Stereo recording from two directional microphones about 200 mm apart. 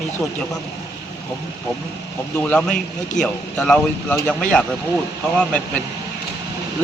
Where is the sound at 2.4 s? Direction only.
5° left (ahead or behind).